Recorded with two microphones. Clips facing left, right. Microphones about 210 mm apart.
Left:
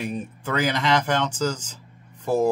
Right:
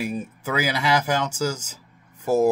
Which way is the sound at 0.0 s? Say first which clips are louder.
Right 1 dB; 10° right (ahead or behind).